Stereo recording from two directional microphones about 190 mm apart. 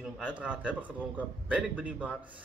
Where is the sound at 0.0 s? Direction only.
5° right (ahead or behind).